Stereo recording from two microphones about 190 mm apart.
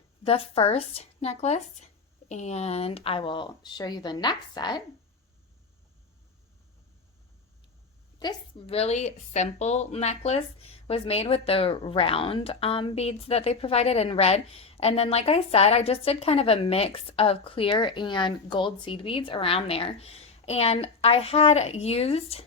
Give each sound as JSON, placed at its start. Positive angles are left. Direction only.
{"t": 0.3, "sound": "a woman's voice", "side_deg": 30}
{"t": 8.2, "sound": "a woman's voice", "side_deg": 25}